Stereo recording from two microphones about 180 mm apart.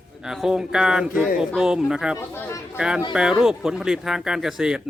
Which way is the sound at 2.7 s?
5° right (ahead or behind).